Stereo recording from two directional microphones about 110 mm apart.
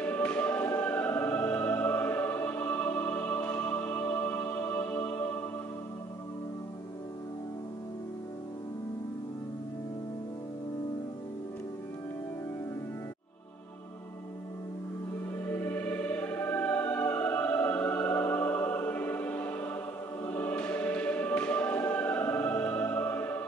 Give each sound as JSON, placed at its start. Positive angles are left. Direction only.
{"t": 0.0, "sound": "music", "side_deg": 15}
{"t": 15.4, "sound": "music", "side_deg": 20}
{"t": 20.2, "sound": "choir", "side_deg": 20}